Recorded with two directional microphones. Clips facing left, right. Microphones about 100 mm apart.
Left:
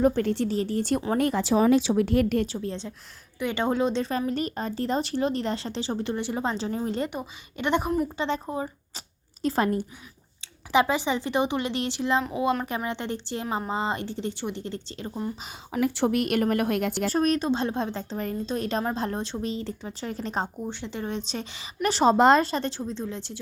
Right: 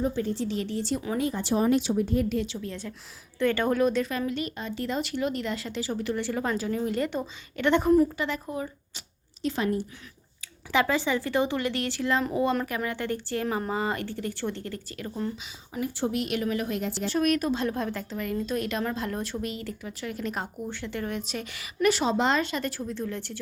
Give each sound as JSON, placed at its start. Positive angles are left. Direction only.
{"t": 0.0, "sound": "speech", "side_deg": 70}
{"t": 0.4, "sound": "speech", "side_deg": 40}
{"t": 0.8, "sound": "a woman's voice", "side_deg": 55}
{"t": 1.1, "sound": "speech", "side_deg": 70}
{"t": 2.5, "sound": "speech", "side_deg": 35}
{"t": 3.3, "sound": "speech", "side_deg": 20}
{"t": 4.3, "sound": "speech", "side_deg": 40}
{"t": 7.1, "sound": "a woman's voice", "side_deg": 15}
{"t": 8.0, "sound": "speech", "side_deg": 25}
{"t": 9.4, "sound": "a woman's voice", "side_deg": 45}
{"t": 10.7, "sound": "a woman's voice", "side_deg": 20}
{"t": 15.7, "sound": "speech", "side_deg": 75}
{"t": 16.1, "sound": "a woman's voice", "side_deg": 50}
{"t": 17.1, "sound": "speech", "side_deg": 35}